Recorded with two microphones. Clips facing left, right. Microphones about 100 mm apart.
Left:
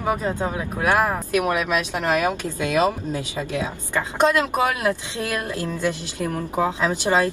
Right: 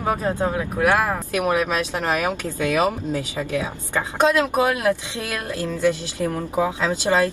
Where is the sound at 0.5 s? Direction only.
20° left (ahead or behind).